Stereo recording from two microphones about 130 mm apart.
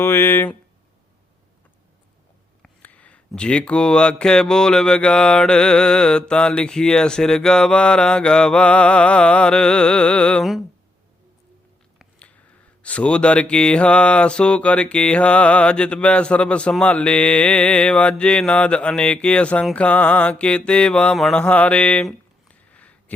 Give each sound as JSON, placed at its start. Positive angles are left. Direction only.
{"t": 0.0, "sound": "speech", "side_deg": 15}
{"t": 2.6, "sound": "speech", "side_deg": 10}
{"t": 12.8, "sound": "speech", "side_deg": 10}
{"t": 19.7, "sound": "mantra", "side_deg": 10}